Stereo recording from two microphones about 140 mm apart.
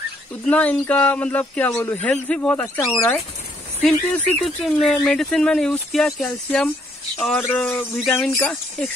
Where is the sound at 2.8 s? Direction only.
25° left (ahead or behind).